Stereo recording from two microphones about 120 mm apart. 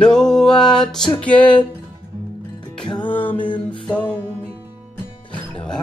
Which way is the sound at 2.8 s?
40° left (ahead or behind).